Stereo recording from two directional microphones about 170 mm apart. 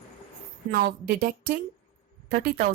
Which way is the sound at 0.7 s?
55° right (ahead or behind).